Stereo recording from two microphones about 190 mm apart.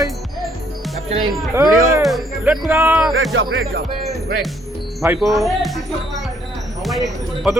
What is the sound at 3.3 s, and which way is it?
Speech, 85° right.